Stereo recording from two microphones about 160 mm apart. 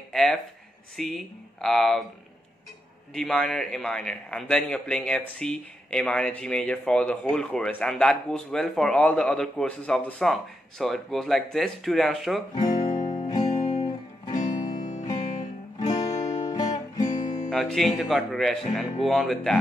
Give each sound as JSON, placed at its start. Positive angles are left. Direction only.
{"t": 0.1, "sound": "speech", "side_deg": 0}
{"t": 3.2, "sound": "speech", "side_deg": 0}
{"t": 12.5, "sound": "music", "side_deg": 25}
{"t": 13.6, "sound": "music", "side_deg": 45}
{"t": 14.5, "sound": "music", "side_deg": 25}
{"t": 14.8, "sound": "music", "side_deg": 50}
{"t": 16.1, "sound": "music", "side_deg": 45}
{"t": 16.4, "sound": "music", "side_deg": 25}
{"t": 17.0, "sound": "guitar", "side_deg": 50}
{"t": 17.5, "sound": "speech", "side_deg": 5}